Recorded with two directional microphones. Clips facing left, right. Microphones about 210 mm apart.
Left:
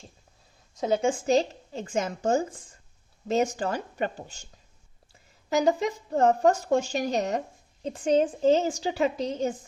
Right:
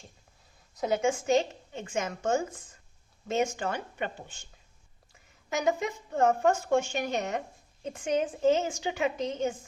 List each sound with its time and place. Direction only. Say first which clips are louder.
0.8 s speech: left 2 dB; 30° left (ahead or behind)
5.5 s speech: left 5 dB; 35° left (ahead or behind)